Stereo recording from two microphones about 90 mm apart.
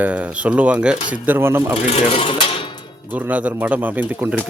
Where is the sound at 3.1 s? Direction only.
20° right (ahead or behind).